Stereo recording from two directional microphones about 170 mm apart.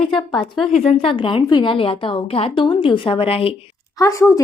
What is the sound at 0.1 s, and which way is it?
Speech, 25° left (ahead or behind).